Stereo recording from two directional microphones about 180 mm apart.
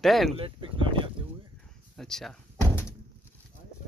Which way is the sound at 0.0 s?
Centre (ahead or behind).